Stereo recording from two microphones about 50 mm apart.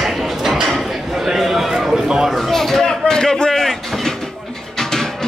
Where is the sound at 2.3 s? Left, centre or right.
Centre.